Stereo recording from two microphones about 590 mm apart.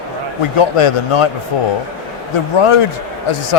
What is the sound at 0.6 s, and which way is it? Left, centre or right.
Speech, left.